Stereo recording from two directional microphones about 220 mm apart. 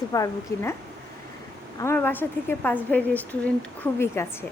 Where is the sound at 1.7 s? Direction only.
10° left (ahead or behind).